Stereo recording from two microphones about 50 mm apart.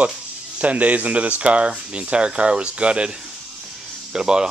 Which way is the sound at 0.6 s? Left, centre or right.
Right.